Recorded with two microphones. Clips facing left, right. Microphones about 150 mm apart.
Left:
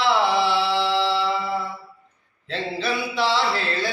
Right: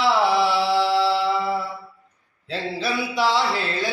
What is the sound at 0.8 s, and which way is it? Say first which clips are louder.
Music: right 2 dB; 10° right (ahead or behind).